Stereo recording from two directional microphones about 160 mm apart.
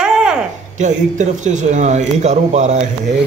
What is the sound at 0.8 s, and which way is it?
Speech, 50° right (ahead or behind).